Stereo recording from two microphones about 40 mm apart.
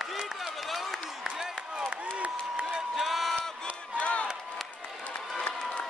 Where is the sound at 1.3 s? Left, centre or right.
Centre.